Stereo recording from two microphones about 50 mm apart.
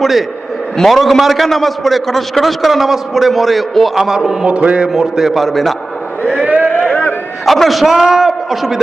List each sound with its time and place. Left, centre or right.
0.0 s a man's voice: centre
4.4 s speech: right
4.9 s a man's voice: centre
6.4 s a sound: right
7.4 s a man's voice: centre